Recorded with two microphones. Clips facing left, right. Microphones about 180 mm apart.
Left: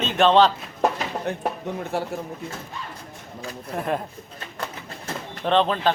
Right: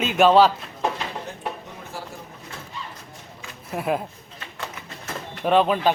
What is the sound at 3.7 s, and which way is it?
Speech, 5° right (ahead or behind).